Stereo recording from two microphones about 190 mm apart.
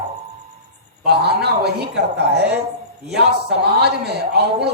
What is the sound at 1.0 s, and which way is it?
Speech, 60° right (ahead or behind).